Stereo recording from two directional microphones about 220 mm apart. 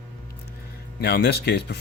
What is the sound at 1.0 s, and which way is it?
Speech, 45° left (ahead or behind).